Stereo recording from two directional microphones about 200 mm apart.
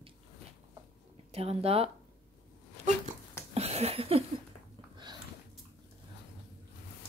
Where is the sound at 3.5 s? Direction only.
30° right (ahead or behind).